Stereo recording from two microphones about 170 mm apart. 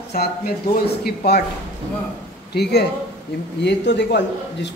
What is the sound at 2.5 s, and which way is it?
A man's voice, 80° left.